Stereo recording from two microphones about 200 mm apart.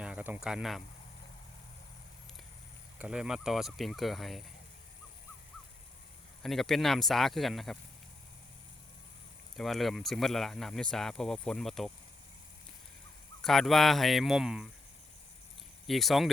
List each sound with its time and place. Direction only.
0.0 s a sound: 5° right (ahead or behind)
3.0 s speech: 5° right (ahead or behind)
6.4 s speech: centre (ahead or behind)
9.6 s speech: centre (ahead or behind)
13.4 s speech: centre (ahead or behind)
15.9 s speech: centre (ahead or behind)